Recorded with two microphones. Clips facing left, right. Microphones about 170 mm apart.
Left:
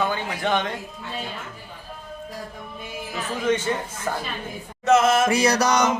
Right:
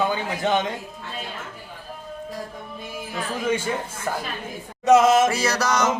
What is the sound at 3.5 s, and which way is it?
Speech, 10° right (ahead or behind).